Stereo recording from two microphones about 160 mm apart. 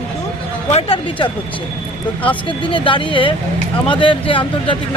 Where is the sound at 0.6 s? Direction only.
40° left (ahead or behind).